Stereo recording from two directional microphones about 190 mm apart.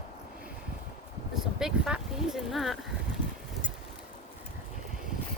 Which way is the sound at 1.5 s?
5° right (ahead or behind).